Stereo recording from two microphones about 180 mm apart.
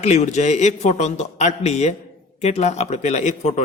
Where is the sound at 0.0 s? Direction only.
40° left (ahead or behind).